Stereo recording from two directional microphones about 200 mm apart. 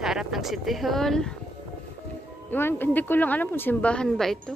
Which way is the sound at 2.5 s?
10° left (ahead or behind).